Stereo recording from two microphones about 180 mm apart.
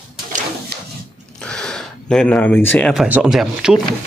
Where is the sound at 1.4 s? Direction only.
5° left (ahead or behind).